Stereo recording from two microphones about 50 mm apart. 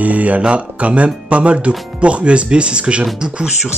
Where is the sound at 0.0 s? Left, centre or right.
Right.